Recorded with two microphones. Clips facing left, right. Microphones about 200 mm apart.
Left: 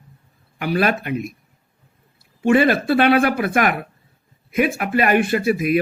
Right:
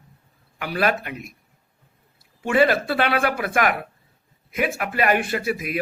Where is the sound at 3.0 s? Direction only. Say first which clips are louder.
Left 6 dB; 25° left (ahead or behind).